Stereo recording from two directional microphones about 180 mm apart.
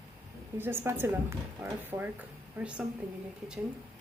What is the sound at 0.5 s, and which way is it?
A woman's voice, 10° right (ahead or behind).